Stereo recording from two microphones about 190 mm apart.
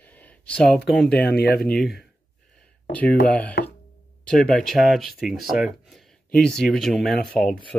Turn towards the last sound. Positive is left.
turn(degrees=5)  # may be behind; listen again after turning